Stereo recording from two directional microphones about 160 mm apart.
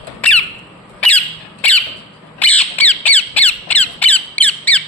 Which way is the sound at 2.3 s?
10° left (ahead or behind).